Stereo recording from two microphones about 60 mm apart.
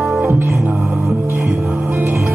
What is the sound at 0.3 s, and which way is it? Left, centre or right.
Music, right.